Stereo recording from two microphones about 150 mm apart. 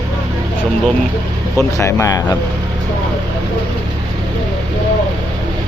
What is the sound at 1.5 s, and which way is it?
Speech, 20° left (ahead or behind).